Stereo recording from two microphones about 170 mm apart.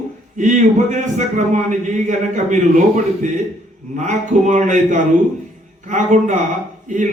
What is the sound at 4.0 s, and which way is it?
A man's voice, 45° right (ahead or behind).